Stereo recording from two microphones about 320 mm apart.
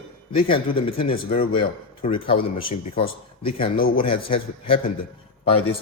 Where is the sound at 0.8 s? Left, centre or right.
Centre.